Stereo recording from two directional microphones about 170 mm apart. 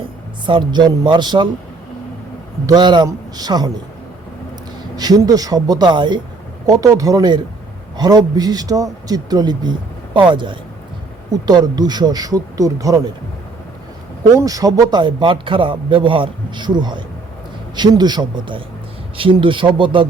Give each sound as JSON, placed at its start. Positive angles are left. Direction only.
{"t": 0.4, "sound": "a man's voice", "side_deg": -25}
{"t": 2.6, "sound": "a man's voice", "side_deg": -25}
{"t": 4.9, "sound": "a man's voice", "side_deg": -25}
{"t": 14.3, "sound": "a man's voice", "side_deg": -20}